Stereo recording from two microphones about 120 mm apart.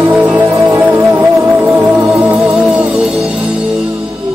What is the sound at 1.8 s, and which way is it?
Music, 5° right (ahead or behind).